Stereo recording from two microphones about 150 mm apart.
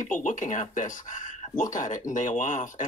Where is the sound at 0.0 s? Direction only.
60° left (ahead or behind).